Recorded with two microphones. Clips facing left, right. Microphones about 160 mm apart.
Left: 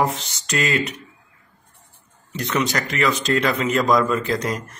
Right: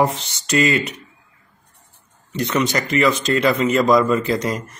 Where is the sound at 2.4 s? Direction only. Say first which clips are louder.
Right 2 dB; 5° right (ahead or behind).